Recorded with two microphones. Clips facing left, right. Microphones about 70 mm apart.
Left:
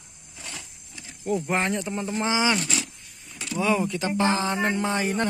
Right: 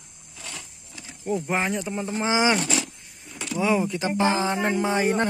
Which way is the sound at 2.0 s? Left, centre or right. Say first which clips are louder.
Right 2 dB; right.